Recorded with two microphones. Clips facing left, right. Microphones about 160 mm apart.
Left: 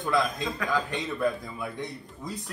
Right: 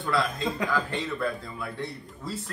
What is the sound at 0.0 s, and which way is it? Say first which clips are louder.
A man's voice: even; 15° left (ahead or behind).